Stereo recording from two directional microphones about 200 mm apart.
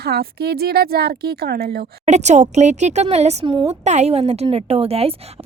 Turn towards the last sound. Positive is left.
turn(degrees=-30)  # may be behind; listen again after turning